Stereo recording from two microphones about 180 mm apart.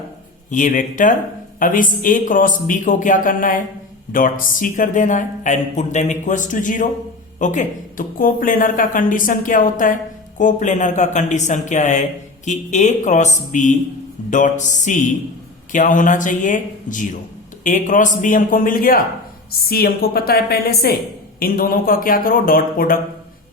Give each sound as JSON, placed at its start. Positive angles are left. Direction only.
{"t": 0.5, "sound": "a woman's voice", "side_deg": 45}